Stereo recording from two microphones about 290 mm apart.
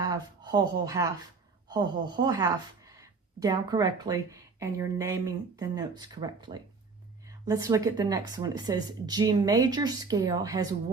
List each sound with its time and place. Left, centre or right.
0.0 s speech: centre